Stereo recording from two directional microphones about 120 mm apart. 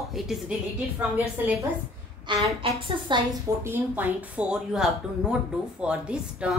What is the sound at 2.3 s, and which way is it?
Speech, 40° right (ahead or behind).